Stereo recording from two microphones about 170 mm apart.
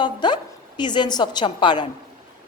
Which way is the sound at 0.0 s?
25° left (ahead or behind).